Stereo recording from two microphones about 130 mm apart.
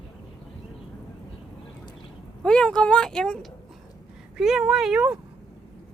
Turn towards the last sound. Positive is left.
turn(degrees=-5)  # may be behind; listen again after turning